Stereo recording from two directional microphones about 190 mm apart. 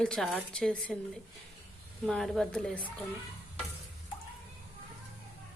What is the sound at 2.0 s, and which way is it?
Speech, centre (ahead or behind).